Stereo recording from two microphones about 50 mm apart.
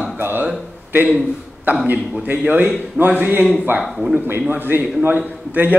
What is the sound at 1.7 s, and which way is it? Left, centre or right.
A man's voice, right.